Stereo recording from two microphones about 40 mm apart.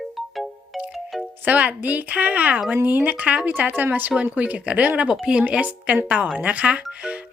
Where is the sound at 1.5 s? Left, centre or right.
Right.